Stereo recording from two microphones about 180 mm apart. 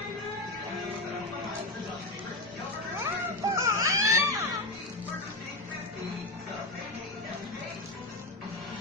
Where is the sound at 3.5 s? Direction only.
15° right (ahead or behind).